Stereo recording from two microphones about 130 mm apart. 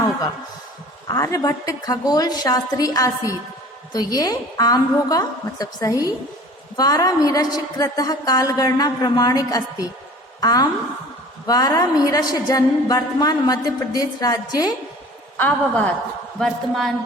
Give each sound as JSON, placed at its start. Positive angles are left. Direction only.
{"t": 1.0, "sound": "a woman's voice", "side_deg": 25}
{"t": 15.4, "sound": "a woman's voice", "side_deg": 10}
{"t": 16.4, "sound": "speech", "side_deg": 0}